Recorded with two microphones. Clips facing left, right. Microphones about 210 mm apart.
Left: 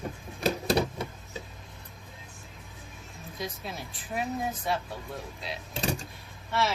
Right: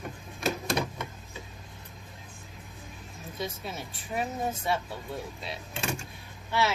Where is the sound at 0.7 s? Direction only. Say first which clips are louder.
Left 4 dB; 35° left (ahead or behind).